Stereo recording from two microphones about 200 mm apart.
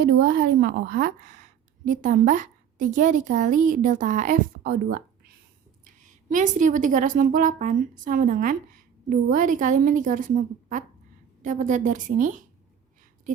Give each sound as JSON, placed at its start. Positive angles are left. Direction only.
{"t": 0.0, "sound": "a woman's voice", "side_deg": -50}